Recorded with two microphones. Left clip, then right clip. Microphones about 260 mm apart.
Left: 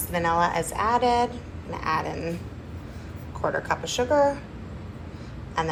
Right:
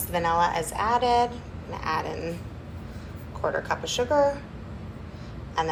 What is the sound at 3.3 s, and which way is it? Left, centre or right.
A woman's voice, centre.